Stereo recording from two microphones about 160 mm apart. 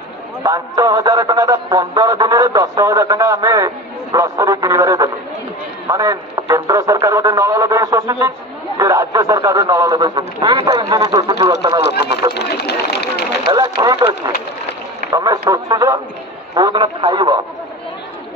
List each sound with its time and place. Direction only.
0.4 s speech: 25° right (ahead or behind)
11.8 s speech: 90° left
13.5 s speech: 25° right (ahead or behind)